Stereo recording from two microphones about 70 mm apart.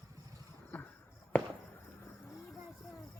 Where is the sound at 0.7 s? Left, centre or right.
Left.